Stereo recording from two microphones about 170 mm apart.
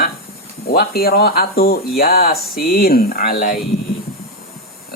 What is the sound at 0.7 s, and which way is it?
Speech, 65° left (ahead or behind).